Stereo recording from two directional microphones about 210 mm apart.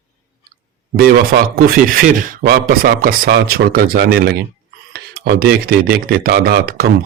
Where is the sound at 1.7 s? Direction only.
45° right (ahead or behind).